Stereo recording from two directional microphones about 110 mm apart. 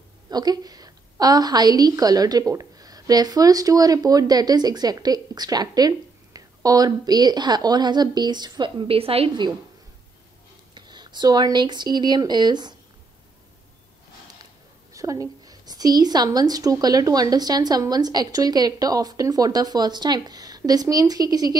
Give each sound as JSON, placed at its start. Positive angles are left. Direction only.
{"t": 0.3, "sound": "a woman's voice", "side_deg": -35}
{"t": 10.7, "sound": "speech", "side_deg": -40}
{"t": 14.4, "sound": "a woman's voice", "side_deg": -30}